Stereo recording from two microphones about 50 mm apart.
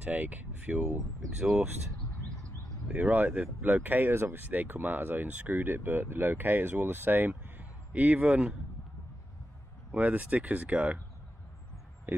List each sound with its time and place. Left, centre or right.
0.0 s speech: right
2.9 s speech: right
4.1 s speech: right
7.9 s speech: right
9.9 s speech: right